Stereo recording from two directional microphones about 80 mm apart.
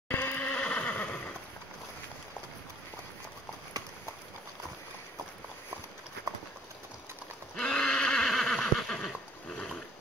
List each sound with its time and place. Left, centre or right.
0.1 s neigh: left
7.5 s neigh: centre